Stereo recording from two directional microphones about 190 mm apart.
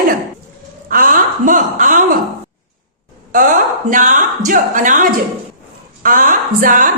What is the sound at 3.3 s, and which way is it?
A woman's voice, 45° right (ahead or behind).